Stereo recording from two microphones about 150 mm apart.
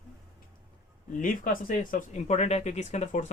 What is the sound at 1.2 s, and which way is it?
Speech, 65° left (ahead or behind).